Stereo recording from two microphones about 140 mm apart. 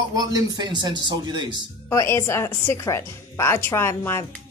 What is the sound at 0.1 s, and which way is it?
A woman's voice, 25° right (ahead or behind).